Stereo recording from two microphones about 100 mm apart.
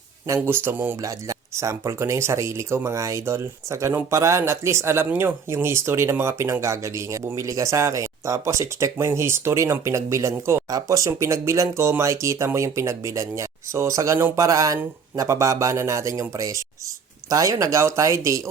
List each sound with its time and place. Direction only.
0.4 s speech: 25° right (ahead or behind)
1.0 s speech: 30° right (ahead or behind)